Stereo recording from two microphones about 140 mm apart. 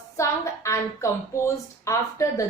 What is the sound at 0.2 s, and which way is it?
A woman's voice, 20° left (ahead or behind).